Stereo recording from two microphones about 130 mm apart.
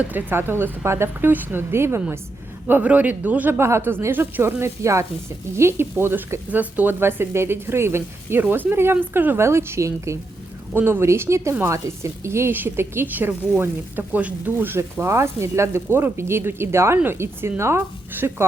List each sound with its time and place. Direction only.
0.0 s a woman's voice: 15° right (ahead or behind)